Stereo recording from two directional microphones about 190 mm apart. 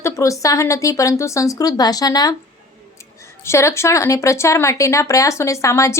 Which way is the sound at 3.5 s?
15° left (ahead or behind).